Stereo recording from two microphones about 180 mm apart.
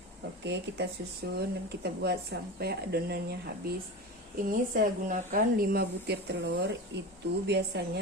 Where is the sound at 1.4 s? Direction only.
65° right (ahead or behind).